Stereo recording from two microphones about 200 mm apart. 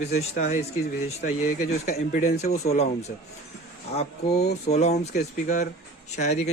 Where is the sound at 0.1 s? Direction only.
35° left (ahead or behind).